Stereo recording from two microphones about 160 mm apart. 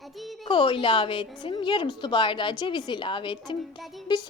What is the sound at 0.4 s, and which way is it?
A woman's voice, 30° left (ahead or behind).